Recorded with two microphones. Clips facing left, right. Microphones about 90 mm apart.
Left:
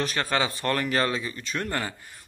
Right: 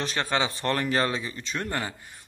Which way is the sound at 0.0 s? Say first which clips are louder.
Left 1 dB; 25° right (ahead or behind).